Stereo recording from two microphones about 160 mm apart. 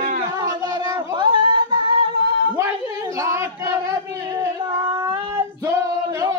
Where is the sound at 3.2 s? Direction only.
20° right (ahead or behind).